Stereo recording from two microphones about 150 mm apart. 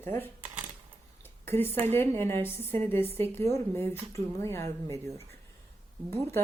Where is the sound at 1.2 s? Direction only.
15° left (ahead or behind).